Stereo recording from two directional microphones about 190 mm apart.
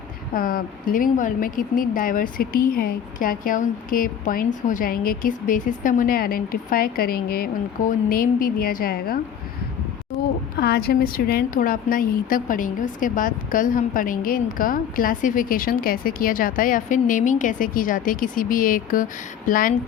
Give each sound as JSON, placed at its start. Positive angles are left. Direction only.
{"t": 0.3, "sound": "speech", "side_deg": 50}
{"t": 10.1, "sound": "speech", "side_deg": 0}
{"t": 10.6, "sound": "speech", "side_deg": 55}